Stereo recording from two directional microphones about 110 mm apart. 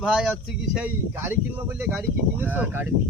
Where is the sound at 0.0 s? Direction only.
5° right (ahead or behind).